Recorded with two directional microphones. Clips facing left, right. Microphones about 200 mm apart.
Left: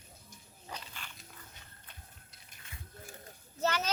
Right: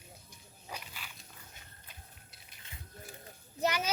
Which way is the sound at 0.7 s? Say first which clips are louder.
Even; 10° right (ahead or behind).